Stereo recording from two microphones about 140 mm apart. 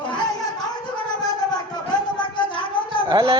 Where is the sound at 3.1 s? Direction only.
30° right (ahead or behind).